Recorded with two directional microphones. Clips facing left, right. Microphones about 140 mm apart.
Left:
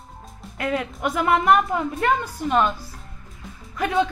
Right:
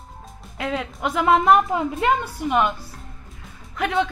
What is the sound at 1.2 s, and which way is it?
A woman's voice, 20° right (ahead or behind).